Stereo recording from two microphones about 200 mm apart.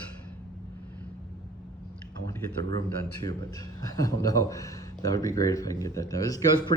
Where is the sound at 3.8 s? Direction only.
15° left (ahead or behind).